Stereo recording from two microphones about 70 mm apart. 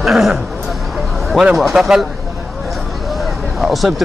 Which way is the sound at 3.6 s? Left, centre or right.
Centre.